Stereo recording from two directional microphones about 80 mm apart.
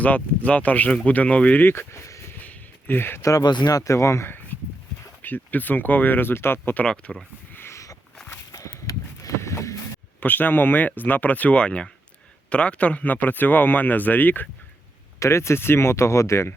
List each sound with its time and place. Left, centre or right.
0.0 s speech: centre
1.6 s speech: left
2.4 s a sound: left
3.2 s speech: left
3.4 s speech: left
5.2 s a man's voice: left
6.8 s speech: centre
7.5 s a sound: left
8.3 s walk: left
10.2 s a man's voice: left
15.2 s speech: left